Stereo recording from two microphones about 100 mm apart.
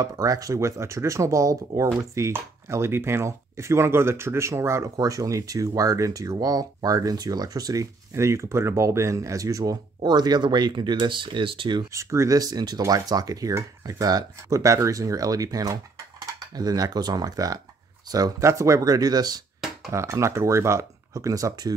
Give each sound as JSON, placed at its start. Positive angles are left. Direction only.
{"t": 0.0, "sound": "speech", "side_deg": -35}
{"t": 11.9, "sound": "speech", "side_deg": -30}
{"t": 19.9, "sound": "speech", "side_deg": -30}